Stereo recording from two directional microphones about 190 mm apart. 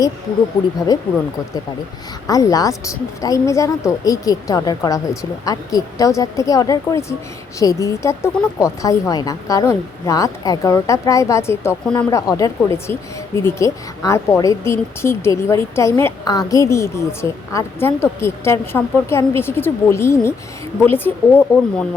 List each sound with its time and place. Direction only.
0.9 s a woman's voice: 20° left (ahead or behind)
2.2 s a woman's voice: 20° left (ahead or behind)